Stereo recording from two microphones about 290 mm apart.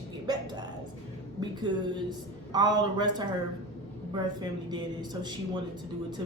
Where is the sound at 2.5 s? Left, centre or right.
Centre.